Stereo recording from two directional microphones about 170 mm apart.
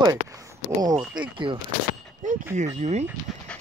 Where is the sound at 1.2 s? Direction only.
30° right (ahead or behind).